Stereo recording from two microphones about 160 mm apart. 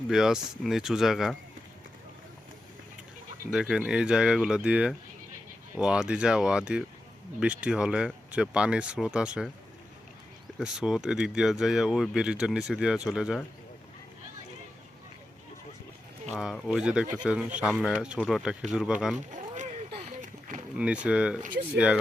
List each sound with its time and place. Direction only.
0.1 s speech: 5° right (ahead or behind)
3.5 s speech: 5° right (ahead or behind)
10.6 s speech: 5° right (ahead or behind)
16.4 s speech: centre (ahead or behind)
19.3 s a sound: 50° right (ahead or behind)
20.7 s speech: 5° right (ahead or behind)